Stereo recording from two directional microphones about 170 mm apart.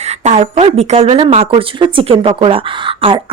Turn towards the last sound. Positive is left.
turn(degrees=-30)  # may be behind; listen again after turning